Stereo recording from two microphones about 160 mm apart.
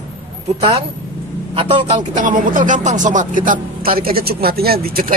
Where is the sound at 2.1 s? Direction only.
55° right (ahead or behind).